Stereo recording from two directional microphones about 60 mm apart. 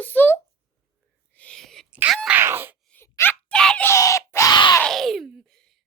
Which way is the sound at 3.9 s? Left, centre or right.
Left.